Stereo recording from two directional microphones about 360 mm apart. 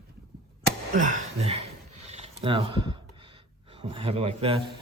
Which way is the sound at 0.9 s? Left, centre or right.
Right.